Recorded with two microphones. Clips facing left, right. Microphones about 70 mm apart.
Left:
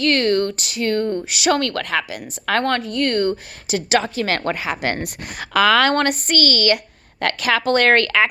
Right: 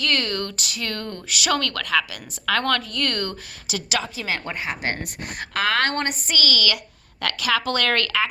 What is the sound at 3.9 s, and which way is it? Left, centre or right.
A woman's voice, left.